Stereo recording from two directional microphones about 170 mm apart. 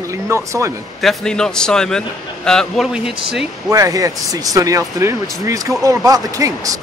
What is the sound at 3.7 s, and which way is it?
Speech, 20° right (ahead or behind).